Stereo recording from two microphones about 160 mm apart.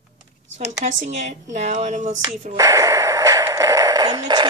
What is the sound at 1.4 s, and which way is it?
Speech, 45° right (ahead or behind).